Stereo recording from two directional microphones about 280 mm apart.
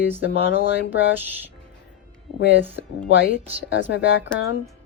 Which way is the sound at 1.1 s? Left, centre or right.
Centre.